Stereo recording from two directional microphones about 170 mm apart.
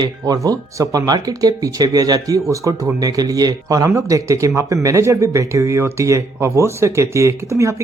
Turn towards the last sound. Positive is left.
turn(degrees=-15)  # may be behind; listen again after turning